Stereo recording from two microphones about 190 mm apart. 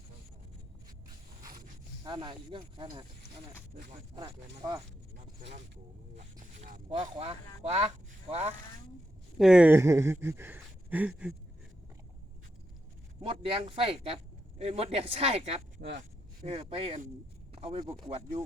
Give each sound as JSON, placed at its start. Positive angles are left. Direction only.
{"t": 1.5, "sound": "zipper", "side_deg": -50}
{"t": 2.0, "sound": "speech", "side_deg": -25}
{"t": 4.1, "sound": "speech", "side_deg": -20}
{"t": 6.4, "sound": "speech", "side_deg": -45}
{"t": 7.0, "sound": "speech", "side_deg": -30}
{"t": 9.4, "sound": "speech", "side_deg": -5}
{"t": 13.2, "sound": "speech", "side_deg": -30}